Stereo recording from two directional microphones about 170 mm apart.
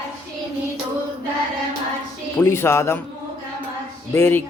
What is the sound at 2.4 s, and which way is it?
Speech, 15° left (ahead or behind).